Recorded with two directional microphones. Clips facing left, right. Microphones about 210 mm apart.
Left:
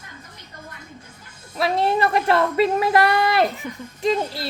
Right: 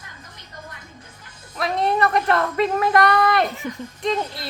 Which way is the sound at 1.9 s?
30° left (ahead or behind).